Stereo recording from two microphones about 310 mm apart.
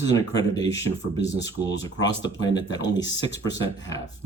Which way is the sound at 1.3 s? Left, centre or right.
Left.